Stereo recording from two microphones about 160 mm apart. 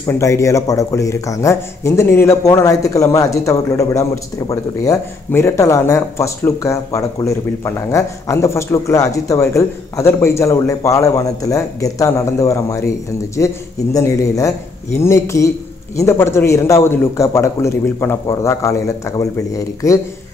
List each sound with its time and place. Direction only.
0.0 s a man's voice: 20° left (ahead or behind)
13.9 s a man's voice: 20° left (ahead or behind)